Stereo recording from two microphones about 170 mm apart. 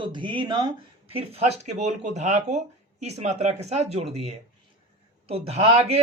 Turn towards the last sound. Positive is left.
turn(degrees=-35)  # may be behind; listen again after turning